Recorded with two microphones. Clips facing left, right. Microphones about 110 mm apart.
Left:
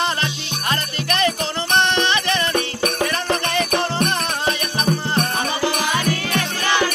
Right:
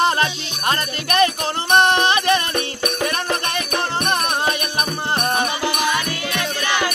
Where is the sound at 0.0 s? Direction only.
45° right (ahead or behind).